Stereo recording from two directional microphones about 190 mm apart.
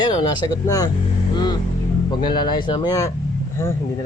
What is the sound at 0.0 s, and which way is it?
Speech, 20° left (ahead or behind).